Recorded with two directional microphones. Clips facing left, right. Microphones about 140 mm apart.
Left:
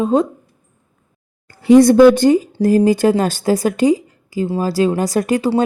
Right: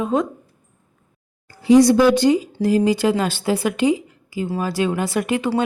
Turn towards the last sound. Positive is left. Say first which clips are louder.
# left 4 dB
turn(degrees=40)  # may be behind; listen again after turning